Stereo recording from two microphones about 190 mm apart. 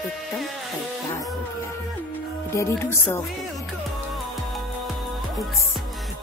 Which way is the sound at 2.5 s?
15° left (ahead or behind).